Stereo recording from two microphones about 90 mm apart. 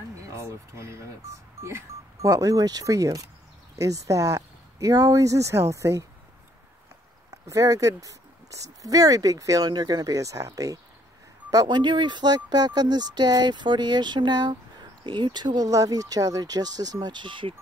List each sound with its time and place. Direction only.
0.3 s speech: 30° right (ahead or behind)
7.2 s speech: 40° right (ahead or behind)
11.5 s speech: 55° right (ahead or behind)